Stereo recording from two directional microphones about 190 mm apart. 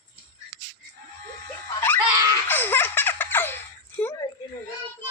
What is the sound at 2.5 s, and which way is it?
Baby laughter, 10° left (ahead or behind).